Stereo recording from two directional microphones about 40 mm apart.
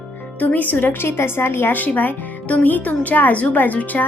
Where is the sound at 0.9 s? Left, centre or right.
Left.